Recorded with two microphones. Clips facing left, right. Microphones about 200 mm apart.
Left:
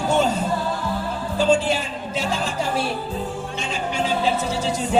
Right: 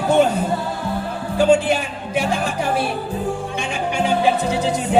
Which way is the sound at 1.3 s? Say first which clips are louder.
Right 4 dB; 60° right (ahead or behind).